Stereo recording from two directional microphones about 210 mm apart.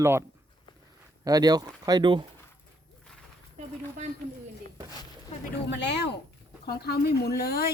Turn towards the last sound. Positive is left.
turn(degrees=45)  # may be behind; listen again after turning